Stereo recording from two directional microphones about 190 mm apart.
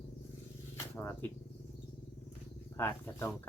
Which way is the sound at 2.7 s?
10° left (ahead or behind).